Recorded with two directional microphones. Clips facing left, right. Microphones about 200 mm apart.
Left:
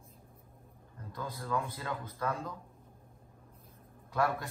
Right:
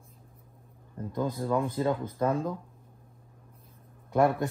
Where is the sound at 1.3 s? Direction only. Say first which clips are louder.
Right 4 dB; 20° right (ahead or behind).